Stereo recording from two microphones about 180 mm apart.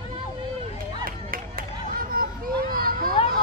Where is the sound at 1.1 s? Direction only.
55° right (ahead or behind).